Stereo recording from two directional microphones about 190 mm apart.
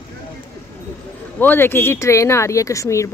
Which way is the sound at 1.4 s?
10° left (ahead or behind).